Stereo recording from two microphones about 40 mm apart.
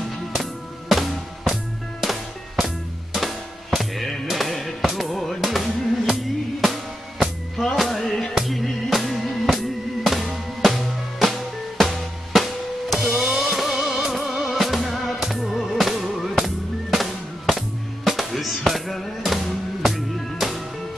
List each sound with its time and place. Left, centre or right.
0.4 s music: centre
7.7 s music: centre
11.8 s drum: centre
13.1 s music: centre